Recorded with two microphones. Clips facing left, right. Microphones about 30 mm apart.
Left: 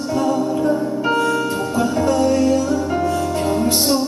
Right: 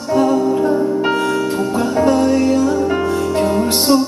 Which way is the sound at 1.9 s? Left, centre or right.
Right.